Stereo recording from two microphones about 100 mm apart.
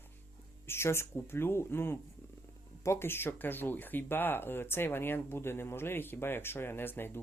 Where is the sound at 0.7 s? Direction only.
25° left (ahead or behind).